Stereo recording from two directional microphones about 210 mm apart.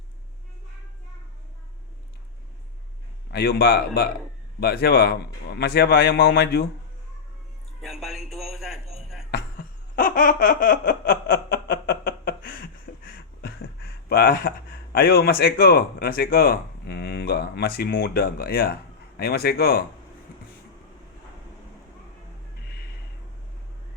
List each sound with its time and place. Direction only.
3.3 s speech: 50° left (ahead or behind)
7.8 s a sound: centre (ahead or behind)
9.3 s laughter: 45° left (ahead or behind)
14.9 s speech: 45° left (ahead or behind)